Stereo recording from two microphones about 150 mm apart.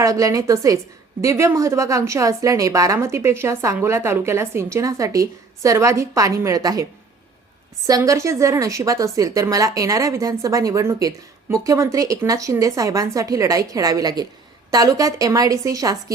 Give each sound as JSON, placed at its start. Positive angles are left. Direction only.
{"t": 0.0, "sound": "a woman's voice", "side_deg": -20}
{"t": 7.9, "sound": "a woman's voice", "side_deg": -20}